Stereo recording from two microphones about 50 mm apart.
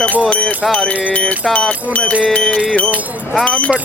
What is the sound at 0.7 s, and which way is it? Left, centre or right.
Speech, left.